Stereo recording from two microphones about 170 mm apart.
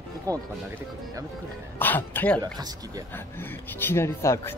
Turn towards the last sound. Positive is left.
turn(degrees=15)  # may be behind; listen again after turning